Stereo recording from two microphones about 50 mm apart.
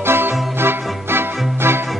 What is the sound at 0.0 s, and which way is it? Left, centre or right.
Music, right.